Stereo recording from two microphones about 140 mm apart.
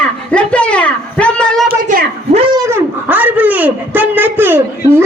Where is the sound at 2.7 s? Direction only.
10° right (ahead or behind).